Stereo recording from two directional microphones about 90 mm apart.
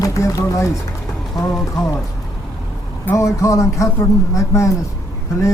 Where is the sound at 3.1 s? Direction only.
35° left (ahead or behind).